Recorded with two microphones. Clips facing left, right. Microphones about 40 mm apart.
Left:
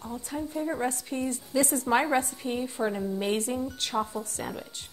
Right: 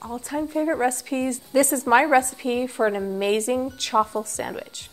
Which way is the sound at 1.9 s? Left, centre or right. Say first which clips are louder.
Right 9 dB; right.